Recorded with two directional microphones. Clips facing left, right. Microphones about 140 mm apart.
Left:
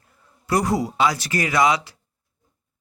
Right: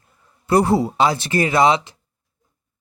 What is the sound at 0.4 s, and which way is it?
A man's voice, 30° right (ahead or behind).